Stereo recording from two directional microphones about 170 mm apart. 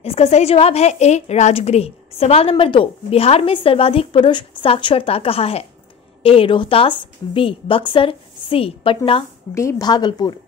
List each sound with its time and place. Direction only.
0.0 s a woman's voice: 35° left (ahead or behind)
9.5 s a woman's voice: 20° left (ahead or behind)